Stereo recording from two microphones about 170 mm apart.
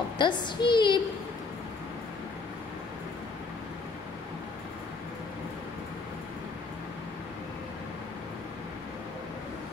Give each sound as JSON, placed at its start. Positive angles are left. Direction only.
{"t": 0.2, "sound": "a woman's voice", "side_deg": 25}